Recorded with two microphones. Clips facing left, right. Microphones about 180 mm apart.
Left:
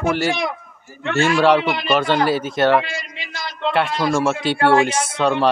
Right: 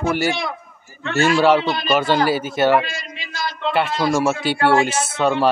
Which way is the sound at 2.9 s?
20° left (ahead or behind).